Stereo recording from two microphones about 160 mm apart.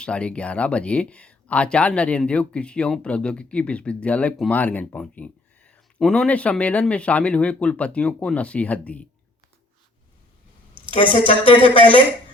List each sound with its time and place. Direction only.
0.0 s speech: 5° left (ahead or behind)
10.8 s a woman's voice: 30° right (ahead or behind)